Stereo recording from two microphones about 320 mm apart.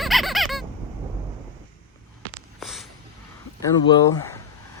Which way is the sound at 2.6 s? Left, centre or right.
Centre.